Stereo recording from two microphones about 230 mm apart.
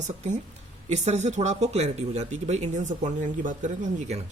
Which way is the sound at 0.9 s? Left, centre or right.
Right.